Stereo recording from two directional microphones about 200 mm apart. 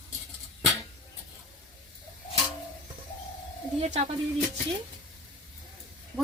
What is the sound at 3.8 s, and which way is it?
Speech, 30° right (ahead or behind).